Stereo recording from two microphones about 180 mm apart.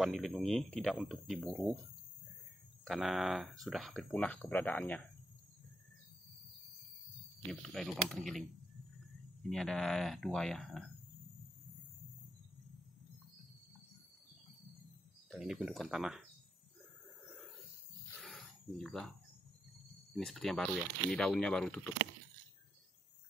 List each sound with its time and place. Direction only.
0.0 s speech: centre (ahead or behind)
2.8 s speech: centre (ahead or behind)
7.6 s speech: centre (ahead or behind)
9.5 s speech: centre (ahead or behind)
15.3 s speech: 5° right (ahead or behind)
18.2 s a sound: centre (ahead or behind)
20.1 s speech: centre (ahead or behind)